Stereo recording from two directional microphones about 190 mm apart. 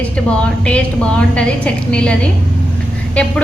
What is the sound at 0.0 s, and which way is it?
A woman's voice, 5° left (ahead or behind).